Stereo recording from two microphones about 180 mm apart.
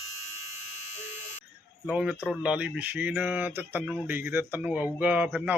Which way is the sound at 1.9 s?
5° right (ahead or behind).